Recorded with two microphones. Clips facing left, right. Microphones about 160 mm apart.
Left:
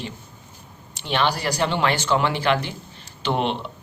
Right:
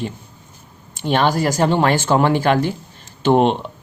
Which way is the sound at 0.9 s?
45° right (ahead or behind).